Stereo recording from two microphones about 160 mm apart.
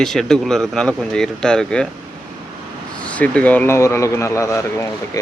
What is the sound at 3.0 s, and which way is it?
Speech, 10° left (ahead or behind).